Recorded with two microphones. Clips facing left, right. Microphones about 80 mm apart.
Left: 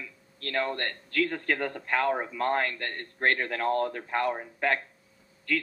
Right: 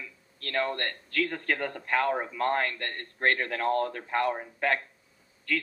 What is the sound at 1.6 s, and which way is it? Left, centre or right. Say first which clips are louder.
Speech: right 1 dB; centre.